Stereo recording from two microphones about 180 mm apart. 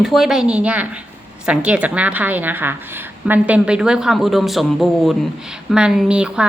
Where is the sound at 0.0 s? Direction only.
Centre (ahead or behind).